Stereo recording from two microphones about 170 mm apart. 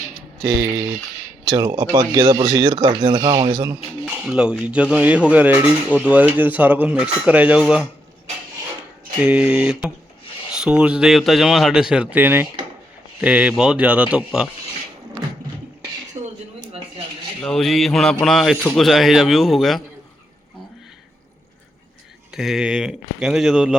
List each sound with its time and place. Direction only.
0.4 s speech: 20° right (ahead or behind)
3.7 s speech: 10° right (ahead or behind)
9.2 s a man's voice: 5° right (ahead or behind)
16.2 s a sound: 20° right (ahead or behind)
17.4 s a man's voice: centre (ahead or behind)
22.3 s a man's voice: centre (ahead or behind)